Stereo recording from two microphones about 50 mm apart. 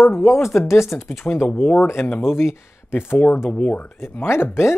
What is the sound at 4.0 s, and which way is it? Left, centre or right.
Speech, left.